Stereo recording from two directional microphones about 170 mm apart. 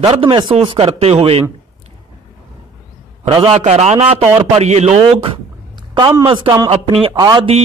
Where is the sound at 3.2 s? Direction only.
30° right (ahead or behind).